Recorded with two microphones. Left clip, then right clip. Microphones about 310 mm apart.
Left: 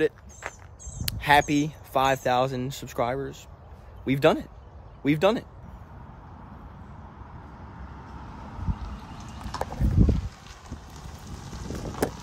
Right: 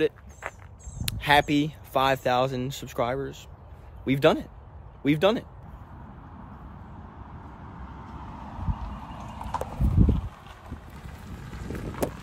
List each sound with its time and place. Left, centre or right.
0.0 s speech: centre
8.0 s vehicle: right
10.0 s a sound: centre
11.2 s wind: centre